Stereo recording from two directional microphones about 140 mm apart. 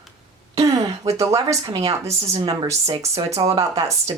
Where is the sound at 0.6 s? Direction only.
25° right (ahead or behind).